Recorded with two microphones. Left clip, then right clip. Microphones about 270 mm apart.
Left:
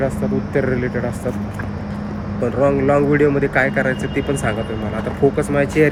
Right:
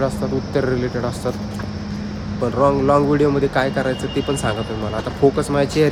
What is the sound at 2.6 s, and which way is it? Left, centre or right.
Speech, centre.